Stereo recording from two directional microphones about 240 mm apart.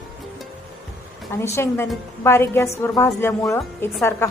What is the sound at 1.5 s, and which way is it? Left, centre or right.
A woman's voice, centre.